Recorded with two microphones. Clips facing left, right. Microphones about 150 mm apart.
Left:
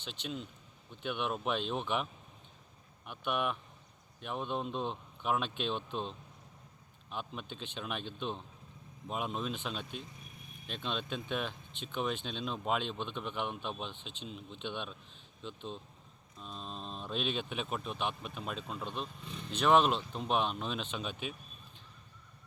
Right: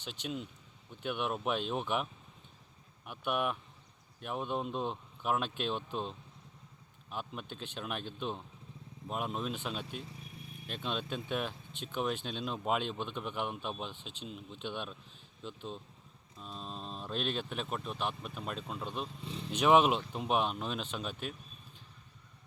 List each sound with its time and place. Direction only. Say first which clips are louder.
0.0 s speech: right 1 dB; 5° right (ahead or behind)
3.1 s speech: right 1 dB; 5° right (ahead or behind)
19.2 s speech: right 3 dB; 30° right (ahead or behind)
19.5 s speech: right 1 dB; 10° right (ahead or behind)